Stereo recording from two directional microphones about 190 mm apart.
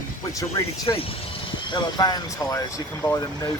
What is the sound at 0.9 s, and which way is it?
Speech, 30° left (ahead or behind).